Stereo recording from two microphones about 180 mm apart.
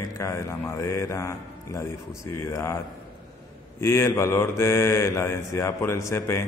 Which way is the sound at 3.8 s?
15° left (ahead or behind).